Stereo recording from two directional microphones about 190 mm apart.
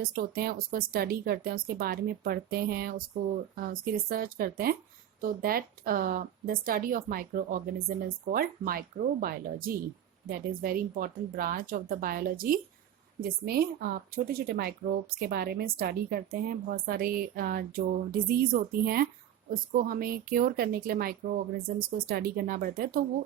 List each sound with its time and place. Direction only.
0.0 s speech: 50° right (ahead or behind)